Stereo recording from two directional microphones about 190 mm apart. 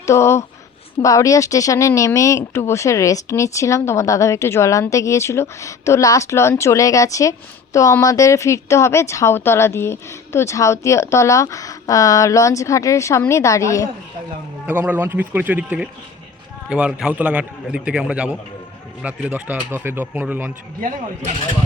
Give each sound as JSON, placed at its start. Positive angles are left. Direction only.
{"t": 0.0, "sound": "speech", "side_deg": 15}
{"t": 14.7, "sound": "a man's voice", "side_deg": -10}